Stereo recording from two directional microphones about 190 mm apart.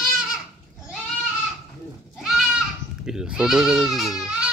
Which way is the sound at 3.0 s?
5° right (ahead or behind).